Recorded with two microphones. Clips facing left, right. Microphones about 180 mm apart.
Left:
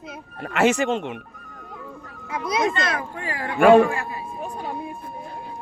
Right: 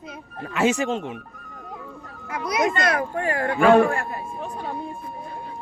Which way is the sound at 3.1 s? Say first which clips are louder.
Right 5 dB; 50° right (ahead or behind).